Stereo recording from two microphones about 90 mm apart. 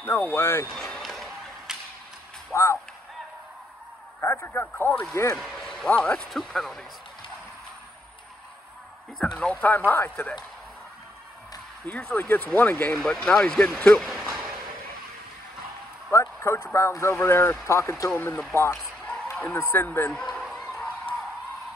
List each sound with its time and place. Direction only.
0.0 s a man's voice: 25° left (ahead or behind)
0.7 s a sound: 5° left (ahead or behind)
2.5 s a sound: 35° left (ahead or behind)
4.2 s a man's voice: 25° left (ahead or behind)
5.4 s speech: 5° left (ahead or behind)
9.2 s a man's voice: 15° left (ahead or behind)
11.9 s a man's voice: 20° left (ahead or behind)
12.9 s speech: 5° left (ahead or behind)
14.0 s a sound: centre (ahead or behind)
16.1 s a man's voice: 30° left (ahead or behind)
20.1 s a man's voice: 5° left (ahead or behind)
20.6 s a sound: 15° left (ahead or behind)